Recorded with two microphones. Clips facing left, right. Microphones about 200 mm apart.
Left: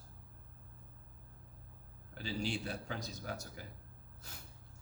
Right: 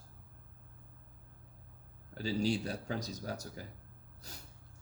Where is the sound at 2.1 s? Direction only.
40° right (ahead or behind).